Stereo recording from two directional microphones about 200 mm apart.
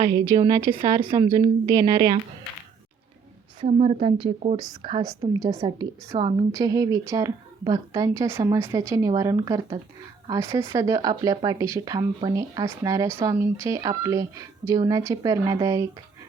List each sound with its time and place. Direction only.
0.0 s a woman's voice: 20° right (ahead or behind)
3.7 s a woman's voice: 35° right (ahead or behind); by 15.9 s 15° right (ahead or behind)